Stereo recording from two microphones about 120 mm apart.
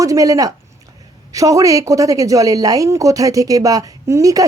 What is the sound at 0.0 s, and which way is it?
Speech, 30° right (ahead or behind).